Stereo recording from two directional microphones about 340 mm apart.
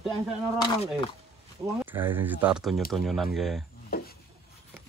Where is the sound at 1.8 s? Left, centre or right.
Centre.